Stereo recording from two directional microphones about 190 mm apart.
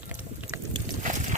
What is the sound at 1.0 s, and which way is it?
Boat, 40° right (ahead or behind).